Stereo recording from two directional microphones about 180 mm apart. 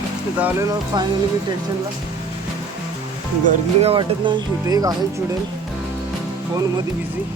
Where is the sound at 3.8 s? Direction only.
30° right (ahead or behind).